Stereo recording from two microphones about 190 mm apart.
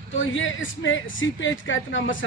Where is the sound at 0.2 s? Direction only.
85° left.